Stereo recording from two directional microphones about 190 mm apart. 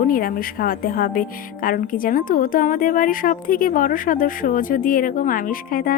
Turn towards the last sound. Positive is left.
turn(degrees=50)  # may be behind; listen again after turning